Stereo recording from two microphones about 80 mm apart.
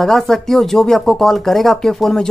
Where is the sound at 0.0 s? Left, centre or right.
Centre.